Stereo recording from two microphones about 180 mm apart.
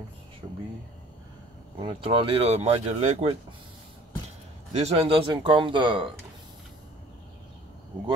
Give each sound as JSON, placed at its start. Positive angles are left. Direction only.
{"t": 0.4, "sound": "a sound", "side_deg": -25}
{"t": 1.8, "sound": "speech", "side_deg": -30}
{"t": 4.7, "sound": "speech", "side_deg": -35}